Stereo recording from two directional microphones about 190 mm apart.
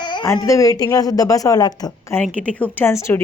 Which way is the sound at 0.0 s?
20° left (ahead or behind).